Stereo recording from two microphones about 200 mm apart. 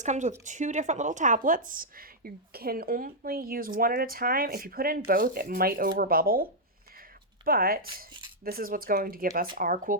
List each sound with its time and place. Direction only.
0.0 s speech: 35° right (ahead or behind)